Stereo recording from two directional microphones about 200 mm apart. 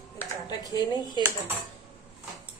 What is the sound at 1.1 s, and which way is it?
Speech, 15° right (ahead or behind).